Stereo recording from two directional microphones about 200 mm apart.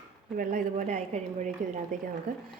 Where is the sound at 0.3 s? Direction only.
40° right (ahead or behind).